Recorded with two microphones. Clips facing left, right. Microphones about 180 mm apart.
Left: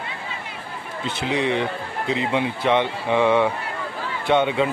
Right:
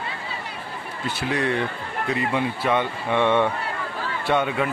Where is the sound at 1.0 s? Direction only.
20° left (ahead or behind).